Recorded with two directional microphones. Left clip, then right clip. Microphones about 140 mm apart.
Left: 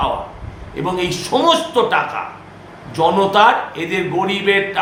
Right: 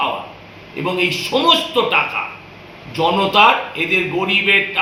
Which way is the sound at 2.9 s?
25° left (ahead or behind).